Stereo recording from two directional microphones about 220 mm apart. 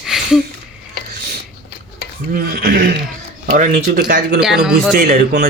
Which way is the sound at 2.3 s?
40° right (ahead or behind).